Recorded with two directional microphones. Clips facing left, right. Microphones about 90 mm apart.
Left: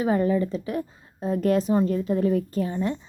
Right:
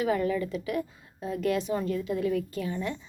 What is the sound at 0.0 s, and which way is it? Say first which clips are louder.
Speech: left 5 dB; 30° left (ahead or behind).